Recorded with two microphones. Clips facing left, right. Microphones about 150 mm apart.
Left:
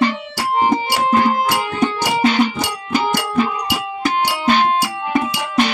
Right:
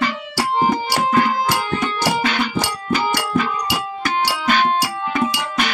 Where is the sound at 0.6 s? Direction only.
25° left (ahead or behind).